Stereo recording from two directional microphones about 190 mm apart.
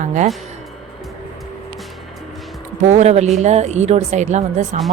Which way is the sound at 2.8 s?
35° right (ahead or behind).